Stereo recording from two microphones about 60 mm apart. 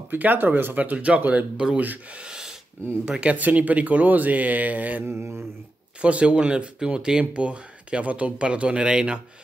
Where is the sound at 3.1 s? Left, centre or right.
Centre.